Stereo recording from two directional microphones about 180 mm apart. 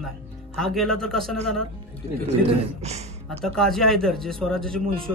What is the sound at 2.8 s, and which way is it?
Speech, 40° right (ahead or behind).